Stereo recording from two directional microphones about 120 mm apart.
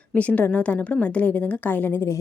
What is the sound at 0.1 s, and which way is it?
A woman's voice, 10° left (ahead or behind).